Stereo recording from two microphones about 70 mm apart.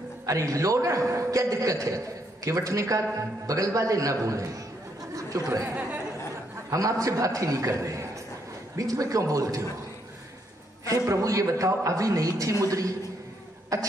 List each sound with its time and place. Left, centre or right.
0.3 s a man's voice: right
10.9 s a man's voice: right
13.7 s a sound: right